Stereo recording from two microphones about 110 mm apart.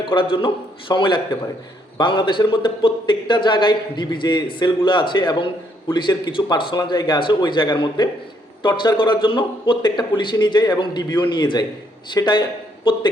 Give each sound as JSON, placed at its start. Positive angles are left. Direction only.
{"t": 0.0, "sound": "a man's voice", "side_deg": 50}